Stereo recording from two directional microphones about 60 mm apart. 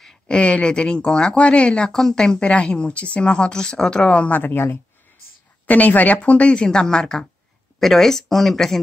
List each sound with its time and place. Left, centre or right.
0.0 s a sound: centre
0.4 s speech: centre
4.4 s a woman's voice: left
5.7 s a woman's voice: left; by 8.7 s centre